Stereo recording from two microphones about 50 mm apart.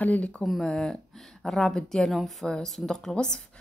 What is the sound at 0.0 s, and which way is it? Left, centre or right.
Speech, left.